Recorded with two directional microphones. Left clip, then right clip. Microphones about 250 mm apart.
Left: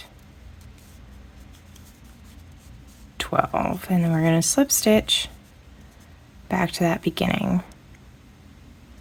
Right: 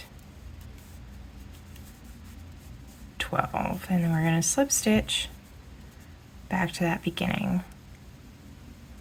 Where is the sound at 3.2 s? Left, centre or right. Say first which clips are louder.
Left 6 dB; left.